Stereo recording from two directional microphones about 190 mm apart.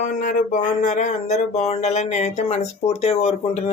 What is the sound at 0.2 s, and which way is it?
Speech, 45° left (ahead or behind).